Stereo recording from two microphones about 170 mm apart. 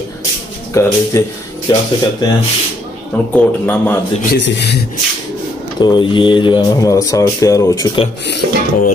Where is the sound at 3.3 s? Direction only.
10° left (ahead or behind).